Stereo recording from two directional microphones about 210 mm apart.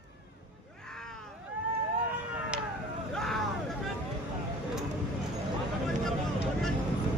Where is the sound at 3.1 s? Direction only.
Centre (ahead or behind).